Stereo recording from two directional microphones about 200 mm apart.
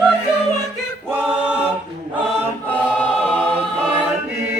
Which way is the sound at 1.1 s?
10° right (ahead or behind).